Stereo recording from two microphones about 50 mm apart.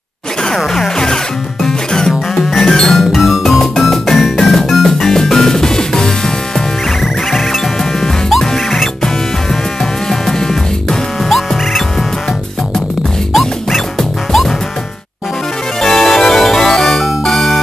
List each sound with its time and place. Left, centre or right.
0.7 s music: centre
3.0 s music: centre
13.3 s music: centre
15.8 s music: centre